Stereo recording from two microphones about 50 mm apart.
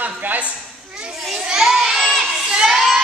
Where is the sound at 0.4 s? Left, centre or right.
Right.